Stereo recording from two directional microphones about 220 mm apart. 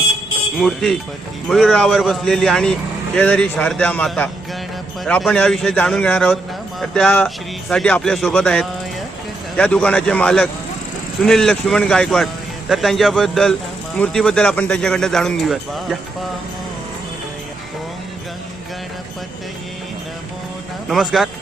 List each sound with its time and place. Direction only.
0.6 s speech: centre (ahead or behind)
20.8 s speech: centre (ahead or behind)